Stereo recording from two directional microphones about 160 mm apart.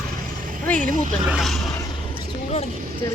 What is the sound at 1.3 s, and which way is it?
Speech, centre (ahead or behind).